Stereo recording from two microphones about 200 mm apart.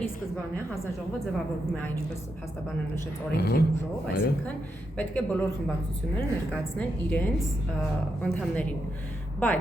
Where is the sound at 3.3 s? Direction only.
55° left (ahead or behind).